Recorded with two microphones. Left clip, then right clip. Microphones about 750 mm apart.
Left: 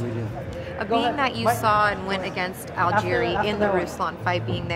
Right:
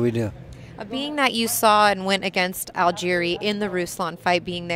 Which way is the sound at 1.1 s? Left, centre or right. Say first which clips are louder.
Even; right.